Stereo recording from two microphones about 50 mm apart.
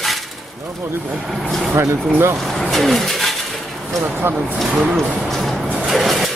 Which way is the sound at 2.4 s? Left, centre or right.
Centre.